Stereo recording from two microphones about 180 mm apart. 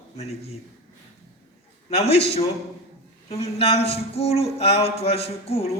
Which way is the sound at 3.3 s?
35° left (ahead or behind).